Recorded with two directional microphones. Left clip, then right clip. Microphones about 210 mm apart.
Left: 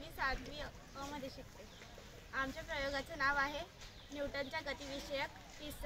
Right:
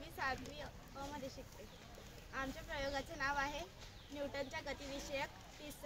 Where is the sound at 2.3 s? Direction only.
15° right (ahead or behind).